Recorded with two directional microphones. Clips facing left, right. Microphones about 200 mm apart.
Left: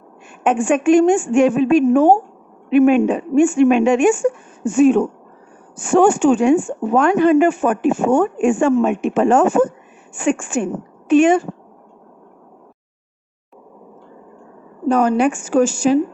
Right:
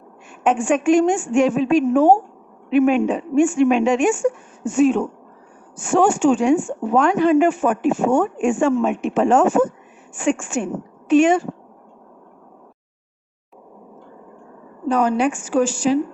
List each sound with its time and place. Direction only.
0.4 s a woman's voice: 55° left (ahead or behind)
14.8 s a woman's voice: 45° left (ahead or behind)